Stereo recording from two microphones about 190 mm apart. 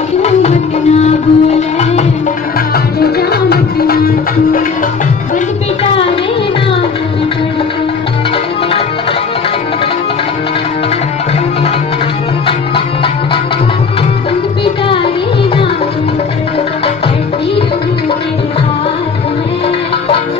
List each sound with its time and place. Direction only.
0.2 s music: 35° left (ahead or behind)
3.0 s music: 55° left (ahead or behind)
12.4 s music: 30° left (ahead or behind)